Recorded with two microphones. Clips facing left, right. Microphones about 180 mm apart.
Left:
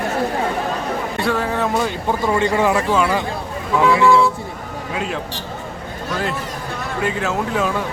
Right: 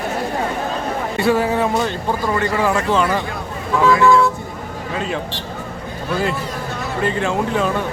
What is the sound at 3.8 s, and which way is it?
Speech, 15° left (ahead or behind).